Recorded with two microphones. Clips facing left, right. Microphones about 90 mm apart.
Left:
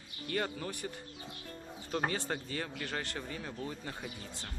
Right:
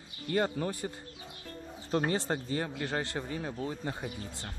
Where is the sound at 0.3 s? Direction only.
30° right (ahead or behind).